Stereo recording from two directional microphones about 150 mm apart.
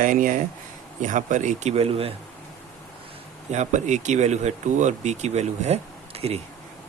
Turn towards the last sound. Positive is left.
turn(degrees=-45)  # may be behind; listen again after turning